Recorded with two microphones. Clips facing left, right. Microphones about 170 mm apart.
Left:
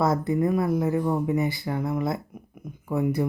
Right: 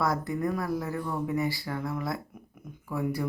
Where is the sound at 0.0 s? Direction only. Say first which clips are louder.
Left 6 dB; 25° left (ahead or behind).